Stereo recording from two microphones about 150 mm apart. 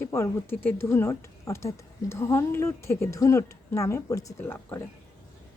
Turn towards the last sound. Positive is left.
turn(degrees=15)  # may be behind; listen again after turning